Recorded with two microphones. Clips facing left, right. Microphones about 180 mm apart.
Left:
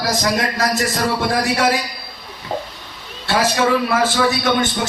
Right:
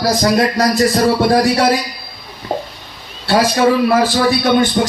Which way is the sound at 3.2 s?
35° right (ahead or behind).